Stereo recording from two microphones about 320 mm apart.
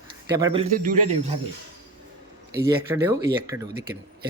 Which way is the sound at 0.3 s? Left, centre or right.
Centre.